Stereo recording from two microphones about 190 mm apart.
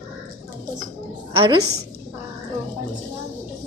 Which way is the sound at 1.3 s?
25° right (ahead or behind).